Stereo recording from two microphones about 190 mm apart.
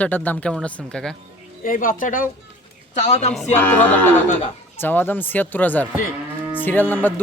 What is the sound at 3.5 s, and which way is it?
Speech, 10° left (ahead or behind).